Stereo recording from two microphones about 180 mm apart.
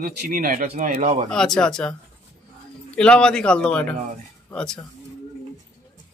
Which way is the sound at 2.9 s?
5° left (ahead or behind).